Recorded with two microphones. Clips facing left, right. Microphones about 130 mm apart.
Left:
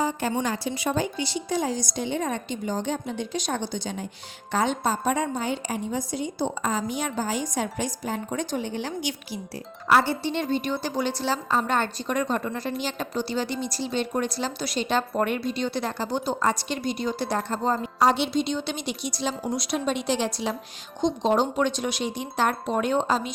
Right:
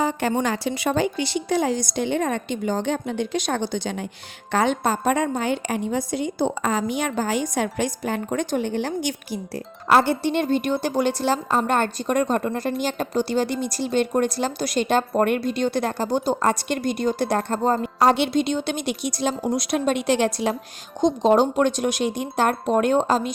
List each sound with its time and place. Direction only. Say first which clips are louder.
0.0 s a woman's voice: right 4 dB; 70° right (ahead or behind); by 23.3 s 45° right (ahead or behind)